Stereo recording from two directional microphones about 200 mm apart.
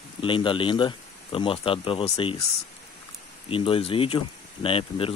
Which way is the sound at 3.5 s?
25° left (ahead or behind).